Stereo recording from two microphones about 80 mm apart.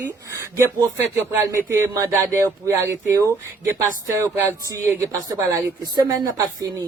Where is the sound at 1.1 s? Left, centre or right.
Right.